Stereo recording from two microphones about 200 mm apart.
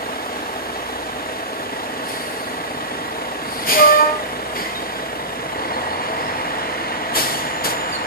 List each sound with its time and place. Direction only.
3.6 s train: 45° left (ahead or behind)